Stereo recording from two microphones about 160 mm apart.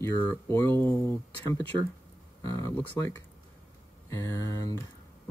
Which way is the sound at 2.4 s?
20° left (ahead or behind).